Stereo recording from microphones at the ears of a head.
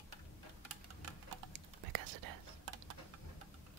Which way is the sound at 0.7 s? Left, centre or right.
Right.